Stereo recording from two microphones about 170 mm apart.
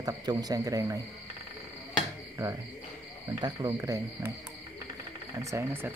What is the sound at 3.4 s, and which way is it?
Speech, 20° right (ahead or behind).